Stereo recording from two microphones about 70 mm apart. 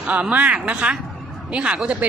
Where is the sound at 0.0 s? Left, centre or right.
Centre.